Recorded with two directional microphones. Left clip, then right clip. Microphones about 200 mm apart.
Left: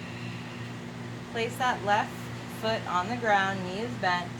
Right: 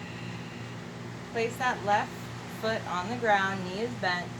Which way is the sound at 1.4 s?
15° left (ahead or behind).